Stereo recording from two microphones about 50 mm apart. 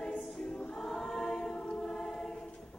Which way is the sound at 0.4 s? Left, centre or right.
Centre.